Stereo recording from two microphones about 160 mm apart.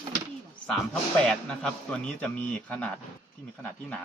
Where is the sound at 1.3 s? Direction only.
5° left (ahead or behind).